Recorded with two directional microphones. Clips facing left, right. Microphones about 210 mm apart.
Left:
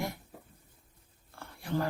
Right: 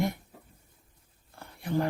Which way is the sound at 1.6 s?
20° right (ahead or behind).